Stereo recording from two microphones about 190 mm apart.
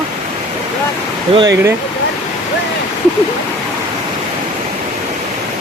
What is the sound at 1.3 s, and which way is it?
Speech, 30° right (ahead or behind).